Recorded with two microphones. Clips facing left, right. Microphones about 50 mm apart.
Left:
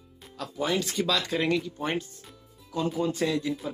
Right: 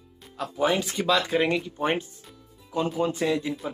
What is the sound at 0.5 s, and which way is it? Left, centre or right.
Speech, centre.